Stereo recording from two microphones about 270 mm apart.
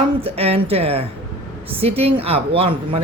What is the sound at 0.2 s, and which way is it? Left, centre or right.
Speech, right.